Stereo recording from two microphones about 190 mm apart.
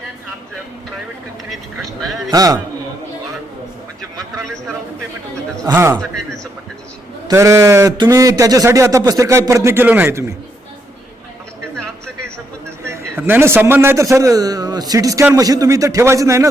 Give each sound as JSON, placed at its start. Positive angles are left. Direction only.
{"t": 2.3, "sound": "a man's voice", "side_deg": -20}
{"t": 5.6, "sound": "speech", "side_deg": -15}
{"t": 7.3, "sound": "speech", "side_deg": -15}
{"t": 12.8, "sound": "a man's voice", "side_deg": -10}